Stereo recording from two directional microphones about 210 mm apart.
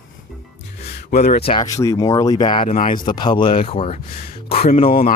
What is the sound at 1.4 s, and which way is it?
Speech, 20° left (ahead or behind).